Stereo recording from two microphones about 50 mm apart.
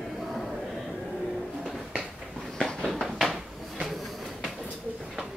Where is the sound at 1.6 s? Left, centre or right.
Centre.